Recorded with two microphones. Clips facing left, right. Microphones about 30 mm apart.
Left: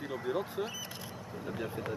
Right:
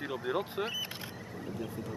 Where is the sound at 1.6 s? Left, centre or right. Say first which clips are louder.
Left 4 dB; left.